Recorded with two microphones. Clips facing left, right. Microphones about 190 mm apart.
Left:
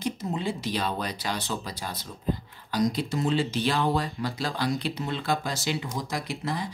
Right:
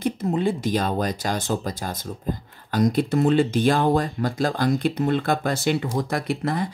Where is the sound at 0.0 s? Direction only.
55° right (ahead or behind).